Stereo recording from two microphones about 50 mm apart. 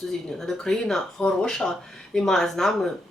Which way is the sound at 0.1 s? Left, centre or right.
Centre.